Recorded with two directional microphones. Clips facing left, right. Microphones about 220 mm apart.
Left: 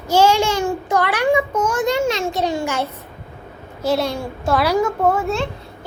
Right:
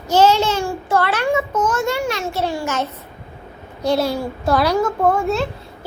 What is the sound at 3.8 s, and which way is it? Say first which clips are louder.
A child's voice: right 1 dB; centre (ahead or behind).